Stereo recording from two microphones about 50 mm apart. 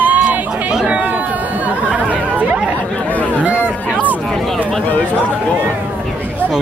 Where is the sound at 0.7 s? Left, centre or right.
Centre.